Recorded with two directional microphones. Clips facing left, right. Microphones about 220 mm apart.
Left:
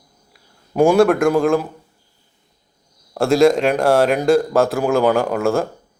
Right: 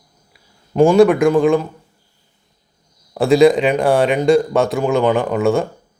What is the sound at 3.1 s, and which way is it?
Speech, centre (ahead or behind).